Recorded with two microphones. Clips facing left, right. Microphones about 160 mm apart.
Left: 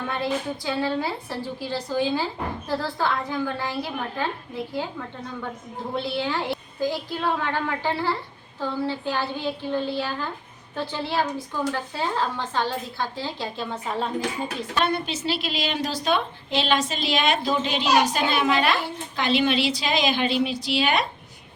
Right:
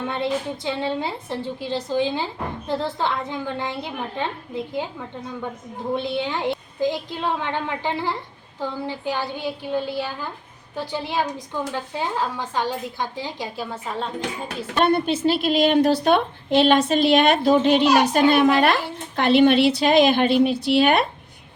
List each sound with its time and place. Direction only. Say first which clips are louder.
0.1 s a woman's voice: even; 25° right (ahead or behind)
13.7 s speech: left 1 dB; centre (ahead or behind)
14.8 s a woman's voice: right 6 dB; 55° right (ahead or behind)